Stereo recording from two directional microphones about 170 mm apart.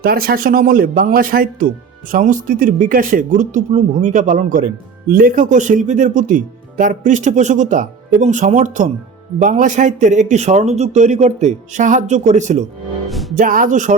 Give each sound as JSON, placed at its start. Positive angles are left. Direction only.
{"t": 0.0, "sound": "a man's voice", "side_deg": -60}
{"t": 13.1, "sound": "music", "side_deg": 0}
{"t": 13.3, "sound": "speech", "side_deg": -55}